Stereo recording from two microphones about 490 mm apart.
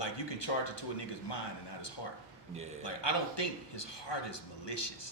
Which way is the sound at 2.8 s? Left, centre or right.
Left.